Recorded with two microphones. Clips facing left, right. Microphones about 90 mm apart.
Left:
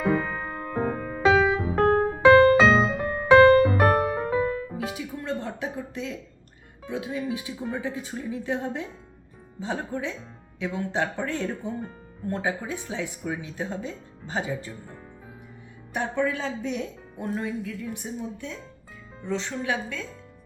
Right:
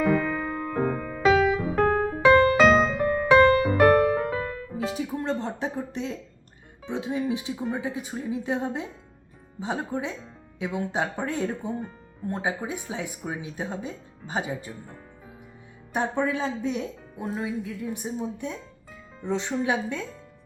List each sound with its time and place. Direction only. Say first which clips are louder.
0.1 s music: right 2 dB; 20° left (ahead or behind)
3.4 s music: left 4 dB; 35° left (ahead or behind)
3.8 s music: right 3 dB; 15° left (ahead or behind)
4.8 s music: right 4 dB; 30° right (ahead or behind)
6.8 s speech: right 2 dB; 20° right (ahead or behind)
16.0 s speech: right 1 dB; 15° right (ahead or behind)
18.2 s speech: right 3 dB; 20° right (ahead or behind)